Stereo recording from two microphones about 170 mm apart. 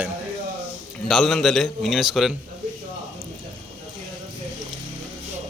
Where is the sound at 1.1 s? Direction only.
Centre (ahead or behind).